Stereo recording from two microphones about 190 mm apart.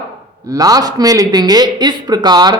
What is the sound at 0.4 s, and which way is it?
A man's voice, 20° right (ahead or behind).